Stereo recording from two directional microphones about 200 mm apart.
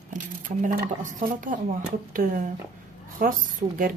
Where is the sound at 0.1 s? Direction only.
40° right (ahead or behind).